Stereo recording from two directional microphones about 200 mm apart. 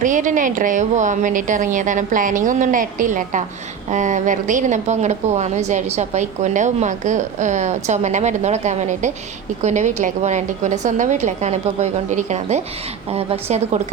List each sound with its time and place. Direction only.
0.0 s a woman's voice: 40° right (ahead or behind)